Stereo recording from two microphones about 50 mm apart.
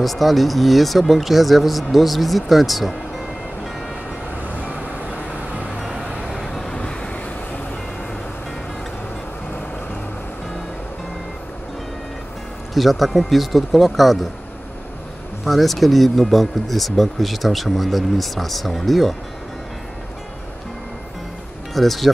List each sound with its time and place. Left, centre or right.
0.0 s speech: centre
4.6 s vehicle: right
5.8 s vehicle: centre
6.7 s vehicle: centre
12.7 s speech: centre
15.4 s speech: centre
21.7 s speech: centre